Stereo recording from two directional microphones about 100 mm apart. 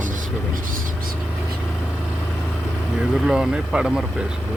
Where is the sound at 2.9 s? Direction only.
5° right (ahead or behind).